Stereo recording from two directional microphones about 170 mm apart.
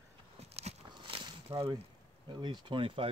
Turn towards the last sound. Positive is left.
turn(degrees=-30)  # may be behind; listen again after turning